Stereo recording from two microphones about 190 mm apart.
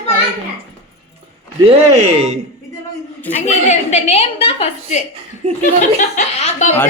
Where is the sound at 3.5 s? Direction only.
35° left (ahead or behind).